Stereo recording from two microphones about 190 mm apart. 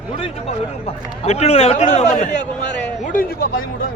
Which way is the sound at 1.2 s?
35° left (ahead or behind).